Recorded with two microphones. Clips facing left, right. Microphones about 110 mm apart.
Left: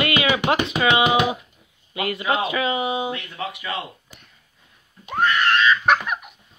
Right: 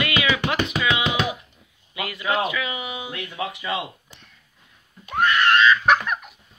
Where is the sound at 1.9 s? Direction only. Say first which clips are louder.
Left 2 dB; 30° left (ahead or behind).